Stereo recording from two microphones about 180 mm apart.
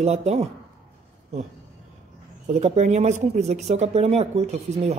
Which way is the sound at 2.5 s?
40° right (ahead or behind).